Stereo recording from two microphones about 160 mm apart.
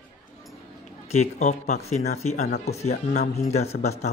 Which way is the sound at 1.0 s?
45° left (ahead or behind).